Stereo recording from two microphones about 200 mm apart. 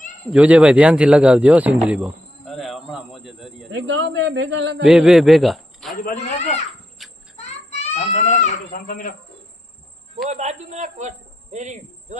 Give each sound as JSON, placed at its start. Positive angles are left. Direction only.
{"t": 0.3, "sound": "speech", "side_deg": -5}
{"t": 1.9, "sound": "a sound", "side_deg": -5}
{"t": 3.7, "sound": "a man's voice", "side_deg": -65}
{"t": 4.9, "sound": "a man's voice", "side_deg": -5}
{"t": 6.0, "sound": "a man's voice", "side_deg": 40}
{"t": 7.0, "sound": "cricket", "side_deg": 0}
{"t": 7.8, "sound": "goat", "side_deg": 35}
{"t": 10.2, "sound": "a man's voice", "side_deg": -35}